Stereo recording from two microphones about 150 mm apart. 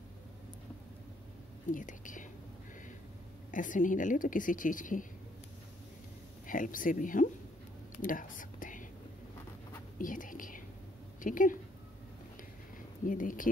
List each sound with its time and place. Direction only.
1.7 s a woman's voice: 60° left (ahead or behind)
3.5 s a woman's voice: 60° left (ahead or behind)
6.4 s a woman's voice: 60° left (ahead or behind)
8.0 s whispering: 65° left (ahead or behind)
9.9 s a woman's voice: 65° left (ahead or behind)
12.7 s a sound: 65° left (ahead or behind)